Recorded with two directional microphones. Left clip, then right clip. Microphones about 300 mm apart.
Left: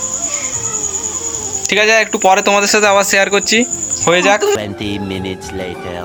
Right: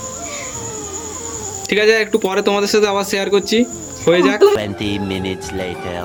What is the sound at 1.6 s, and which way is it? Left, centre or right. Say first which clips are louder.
Speech: left 2 dB; centre.